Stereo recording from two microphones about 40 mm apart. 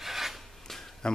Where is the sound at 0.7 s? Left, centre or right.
Centre.